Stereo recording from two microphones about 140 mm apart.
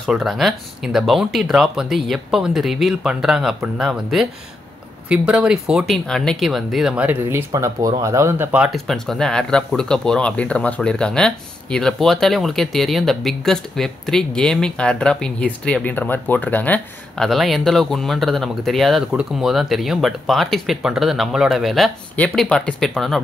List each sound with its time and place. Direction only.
0.0 s speech: centre (ahead or behind)
7.5 s speech: 25° right (ahead or behind)
8.6 s speech: centre (ahead or behind)